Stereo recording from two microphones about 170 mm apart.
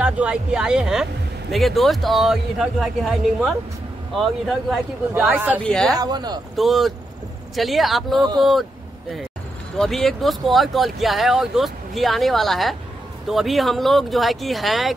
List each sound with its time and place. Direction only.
0.0 s speech: 5° right (ahead or behind)
5.1 s speech: 10° right (ahead or behind)
5.6 s speech: 5° left (ahead or behind)
5.9 s speech: 25° right (ahead or behind)
6.5 s speech: centre (ahead or behind)
9.8 s speech: centre (ahead or behind)